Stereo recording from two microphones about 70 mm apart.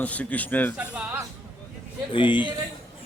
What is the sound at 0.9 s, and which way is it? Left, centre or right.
Speech, centre.